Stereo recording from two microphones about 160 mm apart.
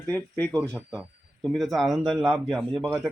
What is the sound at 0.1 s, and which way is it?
Speech, 10° left (ahead or behind).